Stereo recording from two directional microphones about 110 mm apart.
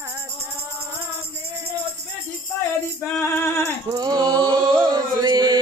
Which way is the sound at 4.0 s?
40° right (ahead or behind).